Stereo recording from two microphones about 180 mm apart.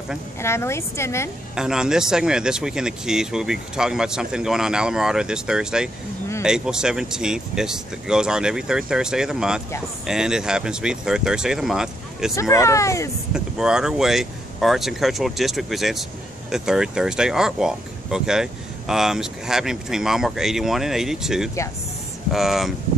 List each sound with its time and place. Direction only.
0.4 s a woman's voice: 15° left (ahead or behind)
1.5 s speech: 5° right (ahead or behind)
12.4 s a woman's voice: 15° left (ahead or behind)
13.3 s speech: 5° right (ahead or behind)